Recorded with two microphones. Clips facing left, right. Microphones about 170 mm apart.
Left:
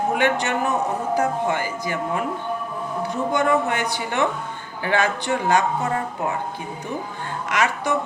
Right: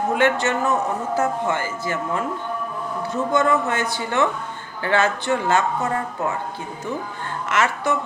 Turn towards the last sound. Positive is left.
turn(degrees=15)  # may be behind; listen again after turning